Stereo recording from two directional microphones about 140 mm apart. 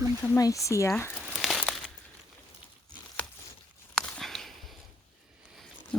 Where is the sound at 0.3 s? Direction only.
25° left (ahead or behind).